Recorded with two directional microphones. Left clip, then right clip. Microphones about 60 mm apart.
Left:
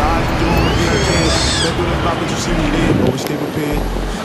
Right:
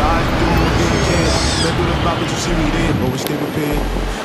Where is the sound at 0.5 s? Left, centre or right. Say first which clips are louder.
Left 1 dB; left.